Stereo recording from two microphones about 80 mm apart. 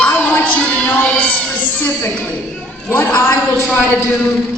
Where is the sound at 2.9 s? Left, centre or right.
Left.